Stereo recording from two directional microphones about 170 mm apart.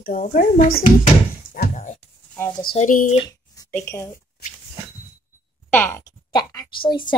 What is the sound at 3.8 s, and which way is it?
Speech, 15° left (ahead or behind).